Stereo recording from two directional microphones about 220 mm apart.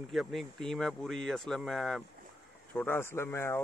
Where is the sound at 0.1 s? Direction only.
Centre (ahead or behind).